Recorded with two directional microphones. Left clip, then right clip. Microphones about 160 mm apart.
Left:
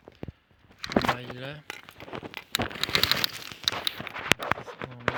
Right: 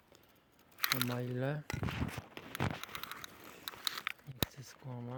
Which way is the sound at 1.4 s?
55° right (ahead or behind).